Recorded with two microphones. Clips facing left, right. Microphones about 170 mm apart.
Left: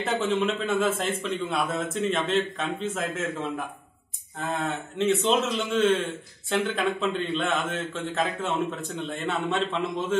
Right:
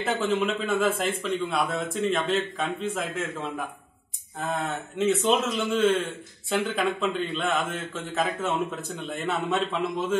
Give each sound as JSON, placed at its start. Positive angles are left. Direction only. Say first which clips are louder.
{"t": 0.0, "sound": "speech", "louder": "even", "side_deg": 0}
{"t": 4.4, "sound": "speech", "louder": "even", "side_deg": 0}